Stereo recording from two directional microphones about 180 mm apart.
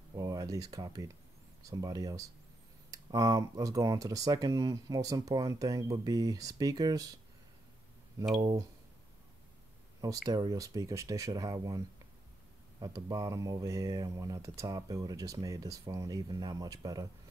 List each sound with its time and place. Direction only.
0.1 s a sound: 20° right (ahead or behind)
1.6 s speech: 20° right (ahead or behind)
8.4 s speech: 20° right (ahead or behind)
10.0 s speech: 20° right (ahead or behind)
12.8 s speech: 20° right (ahead or behind)